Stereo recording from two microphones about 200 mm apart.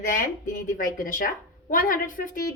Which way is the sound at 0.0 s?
45° left (ahead or behind).